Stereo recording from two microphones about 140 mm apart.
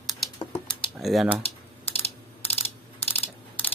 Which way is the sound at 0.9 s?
Centre (ahead or behind).